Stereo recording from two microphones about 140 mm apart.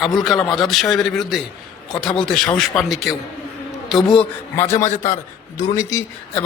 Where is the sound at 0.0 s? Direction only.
Centre (ahead or behind).